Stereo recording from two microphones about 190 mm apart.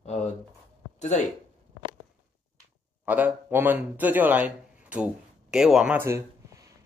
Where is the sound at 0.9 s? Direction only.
35° left (ahead or behind).